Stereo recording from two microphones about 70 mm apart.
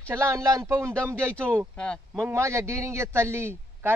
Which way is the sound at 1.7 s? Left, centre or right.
Centre.